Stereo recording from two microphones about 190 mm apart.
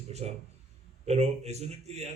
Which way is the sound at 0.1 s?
35° right (ahead or behind).